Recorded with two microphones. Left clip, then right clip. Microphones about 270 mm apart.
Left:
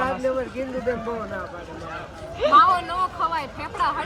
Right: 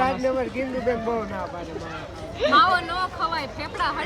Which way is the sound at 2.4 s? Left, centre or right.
Centre.